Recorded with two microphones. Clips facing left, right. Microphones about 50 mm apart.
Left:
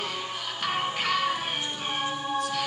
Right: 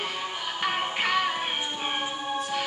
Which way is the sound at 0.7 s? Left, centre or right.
Right.